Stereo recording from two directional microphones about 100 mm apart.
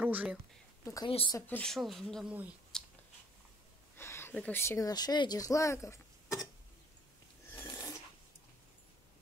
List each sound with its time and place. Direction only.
0.0 s speech: 15° right (ahead or behind)
1.0 s speech: 55° left (ahead or behind)
1.5 s speech: 5° left (ahead or behind)
2.2 s speech: 15° right (ahead or behind)
2.7 s a sound: 5° left (ahead or behind)
3.9 s a sound: 25° left (ahead or behind)
4.4 s speech: 20° left (ahead or behind)
7.7 s filing: 30° left (ahead or behind)